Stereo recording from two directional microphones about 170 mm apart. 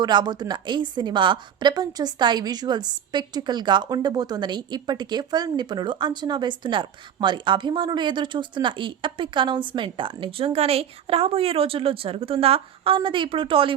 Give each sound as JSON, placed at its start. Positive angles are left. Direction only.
{"t": 0.0, "sound": "a woman's voice", "side_deg": -25}